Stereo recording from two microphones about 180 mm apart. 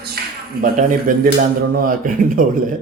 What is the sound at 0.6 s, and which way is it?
Speech, 50° right (ahead or behind).